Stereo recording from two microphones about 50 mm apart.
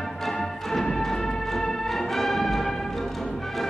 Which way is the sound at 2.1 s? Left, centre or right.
Centre.